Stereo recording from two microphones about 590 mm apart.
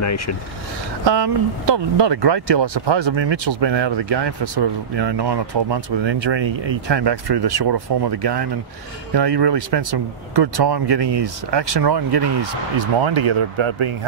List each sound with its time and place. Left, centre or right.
0.0 s speech: left
1.0 s speech: right